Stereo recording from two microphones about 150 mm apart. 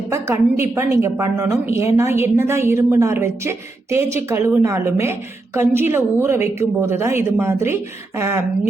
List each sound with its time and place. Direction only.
0.1 s a woman's voice: 20° right (ahead or behind)